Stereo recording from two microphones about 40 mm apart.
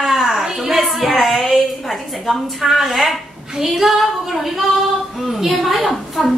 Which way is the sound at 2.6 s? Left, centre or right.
Centre.